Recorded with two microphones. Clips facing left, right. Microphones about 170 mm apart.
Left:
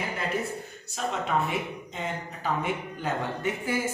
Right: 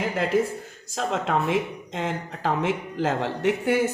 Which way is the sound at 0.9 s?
90° right.